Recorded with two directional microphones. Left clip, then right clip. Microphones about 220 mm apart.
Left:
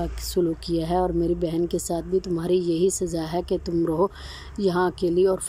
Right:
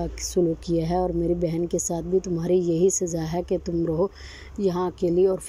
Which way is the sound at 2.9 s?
40° left (ahead or behind).